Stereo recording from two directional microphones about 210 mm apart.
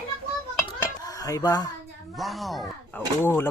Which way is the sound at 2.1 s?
Centre (ahead or behind).